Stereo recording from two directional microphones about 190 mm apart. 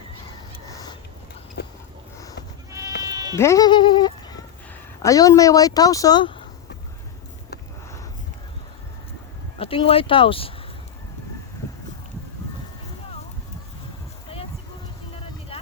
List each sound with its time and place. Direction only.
0.7 s a sound: 20° left (ahead or behind)
1.6 s a sound: 55° left (ahead or behind)
3.0 s bleat: 20° right (ahead or behind)
3.3 s music: 15° left (ahead or behind)
5.0 s speech: 20° left (ahead or behind)
9.6 s speech: 30° left (ahead or behind)
15.1 s vehicle: 30° left (ahead or behind)